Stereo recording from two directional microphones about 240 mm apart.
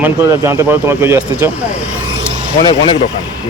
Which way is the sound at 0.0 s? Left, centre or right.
Centre.